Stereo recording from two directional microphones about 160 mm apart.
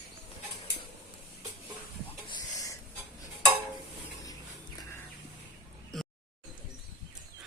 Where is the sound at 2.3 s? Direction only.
25° left (ahead or behind).